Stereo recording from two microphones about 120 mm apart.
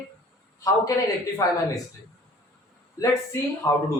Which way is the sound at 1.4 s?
25° left (ahead or behind).